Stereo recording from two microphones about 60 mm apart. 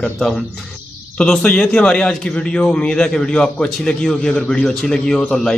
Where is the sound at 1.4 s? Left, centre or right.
Centre.